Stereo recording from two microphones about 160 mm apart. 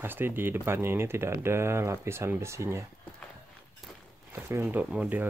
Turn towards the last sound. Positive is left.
turn(degrees=-10)  # may be behind; listen again after turning